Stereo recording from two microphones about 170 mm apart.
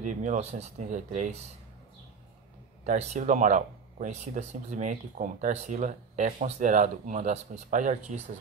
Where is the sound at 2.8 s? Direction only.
45° right (ahead or behind).